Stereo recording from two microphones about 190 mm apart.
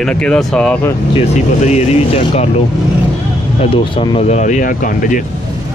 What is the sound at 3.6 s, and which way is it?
Speech, 30° left (ahead or behind).